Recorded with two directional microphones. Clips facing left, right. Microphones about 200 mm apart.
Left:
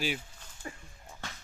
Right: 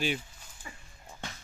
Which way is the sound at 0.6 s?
45° left (ahead or behind).